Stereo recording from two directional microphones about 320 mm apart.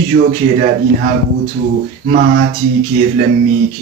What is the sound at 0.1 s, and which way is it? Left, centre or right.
Speech, right.